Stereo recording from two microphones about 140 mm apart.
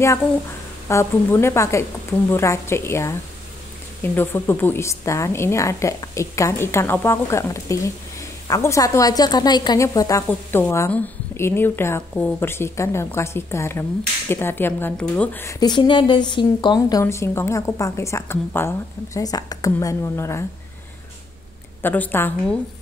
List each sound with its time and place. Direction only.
0.8 s a woman's voice: 20° left (ahead or behind)
15.6 s a woman's voice: 35° left (ahead or behind)
17.0 s a woman's voice: 20° left (ahead or behind)
21.8 s speech: 15° left (ahead or behind)